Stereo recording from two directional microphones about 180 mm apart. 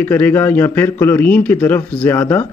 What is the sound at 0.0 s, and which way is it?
Speech, 10° left (ahead or behind).